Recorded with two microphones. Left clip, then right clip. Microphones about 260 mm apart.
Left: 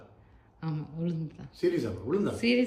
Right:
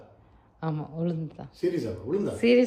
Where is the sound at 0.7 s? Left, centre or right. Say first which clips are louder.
Right 5 dB; centre.